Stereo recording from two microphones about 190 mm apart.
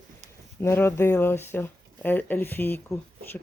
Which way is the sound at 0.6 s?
10° left (ahead or behind).